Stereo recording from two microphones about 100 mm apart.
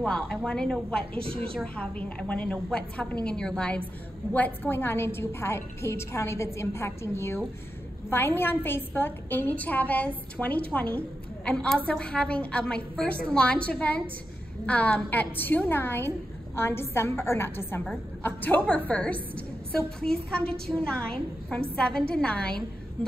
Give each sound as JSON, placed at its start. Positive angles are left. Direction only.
{"t": 0.0, "sound": "a woman's voice", "side_deg": 10}
{"t": 1.2, "sound": "a woman's voice", "side_deg": -70}
{"t": 1.5, "sound": "a woman's voice", "side_deg": 10}